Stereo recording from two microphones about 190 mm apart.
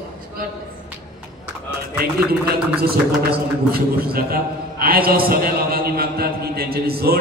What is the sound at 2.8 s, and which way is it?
A man's voice, 55° right (ahead or behind).